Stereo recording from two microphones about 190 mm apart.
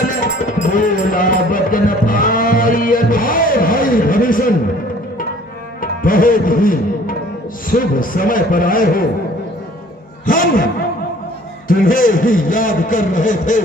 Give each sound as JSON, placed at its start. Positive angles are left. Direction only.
{"t": 0.4, "sound": "music", "side_deg": 45}
{"t": 5.8, "sound": "tabla", "side_deg": 45}
{"t": 7.7, "sound": "a man's voice", "side_deg": 45}
{"t": 10.2, "sound": "a man's voice", "side_deg": 45}
{"t": 11.7, "sound": "a man's voice", "side_deg": 45}